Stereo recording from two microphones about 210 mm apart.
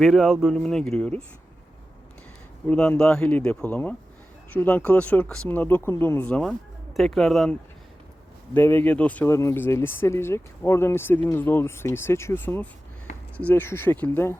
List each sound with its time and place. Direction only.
0.0 s speech: centre (ahead or behind)
2.6 s speech: 5° left (ahead or behind)
8.5 s speech: 10° left (ahead or behind)